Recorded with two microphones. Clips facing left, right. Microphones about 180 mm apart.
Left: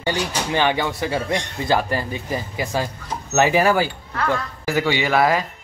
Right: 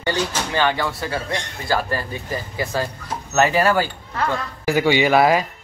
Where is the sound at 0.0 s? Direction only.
15° left (ahead or behind).